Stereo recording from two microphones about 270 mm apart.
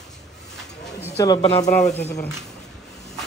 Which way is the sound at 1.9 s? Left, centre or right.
Left.